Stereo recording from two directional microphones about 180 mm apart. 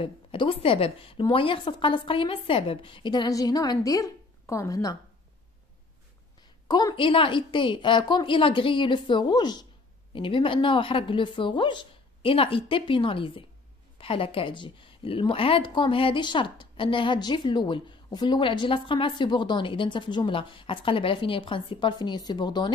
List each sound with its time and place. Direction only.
0.0 s a woman's voice: 30° left (ahead or behind)
6.7 s a woman's voice: 20° left (ahead or behind)